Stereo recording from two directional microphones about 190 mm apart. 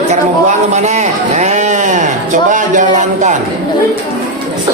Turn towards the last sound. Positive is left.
turn(degrees=-40)  # may be behind; listen again after turning